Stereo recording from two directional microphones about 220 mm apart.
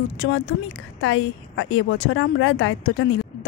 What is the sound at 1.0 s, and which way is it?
Speech, 60° left (ahead or behind).